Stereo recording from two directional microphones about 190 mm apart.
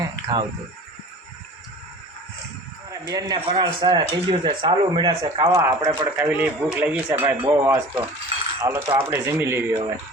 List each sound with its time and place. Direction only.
0.0 s a sound: 20° right (ahead or behind)
3.1 s speech: 20° right (ahead or behind)
5.9 s speech: 25° right (ahead or behind)
6.2 s speech: 10° right (ahead or behind)